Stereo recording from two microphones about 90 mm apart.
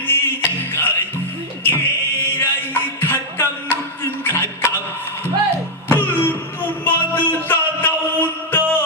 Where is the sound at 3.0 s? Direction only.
25° left (ahead or behind).